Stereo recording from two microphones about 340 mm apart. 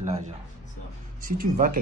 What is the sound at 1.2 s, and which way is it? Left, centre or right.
Speech, right.